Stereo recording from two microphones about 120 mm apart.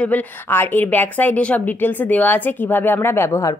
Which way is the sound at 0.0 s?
15° left (ahead or behind).